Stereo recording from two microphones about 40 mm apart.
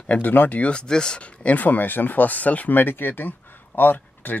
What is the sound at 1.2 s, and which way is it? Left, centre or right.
Speech, left.